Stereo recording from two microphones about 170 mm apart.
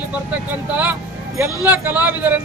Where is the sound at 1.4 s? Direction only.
10° right (ahead or behind).